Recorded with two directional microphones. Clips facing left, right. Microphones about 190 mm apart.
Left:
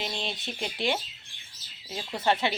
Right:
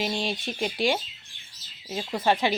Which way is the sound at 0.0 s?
15° right (ahead or behind).